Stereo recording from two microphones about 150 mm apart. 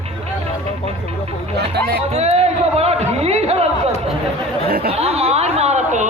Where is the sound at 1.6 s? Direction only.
90° right.